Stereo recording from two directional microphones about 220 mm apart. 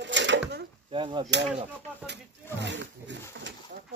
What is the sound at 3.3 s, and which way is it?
Pigeon, 55° right (ahead or behind).